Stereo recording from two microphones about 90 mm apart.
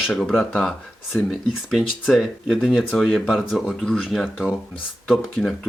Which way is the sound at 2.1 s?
5° left (ahead or behind).